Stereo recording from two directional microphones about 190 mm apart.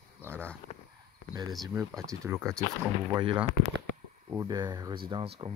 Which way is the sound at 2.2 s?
15° right (ahead or behind).